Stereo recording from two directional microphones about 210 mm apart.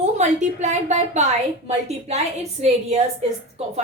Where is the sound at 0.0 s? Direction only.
35° right (ahead or behind).